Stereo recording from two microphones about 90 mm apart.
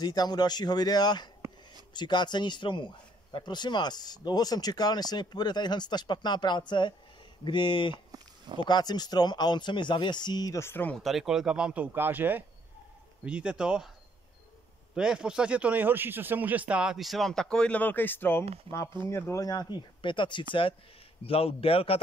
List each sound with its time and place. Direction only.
0.0 s a man's voice: 50° left (ahead or behind)
8.1 s a sound: 55° right (ahead or behind)
8.6 s speech: 50° left (ahead or behind)
10.6 s speech: 25° left (ahead or behind)
11.0 s speech: centre (ahead or behind)
15.0 s speech: 10° right (ahead or behind); by 19.4 s 30° left (ahead or behind)
19.4 s a man's voice: 45° left (ahead or behind); by 20.4 s 60° left (ahead or behind)
21.2 s a man's voice: 90° left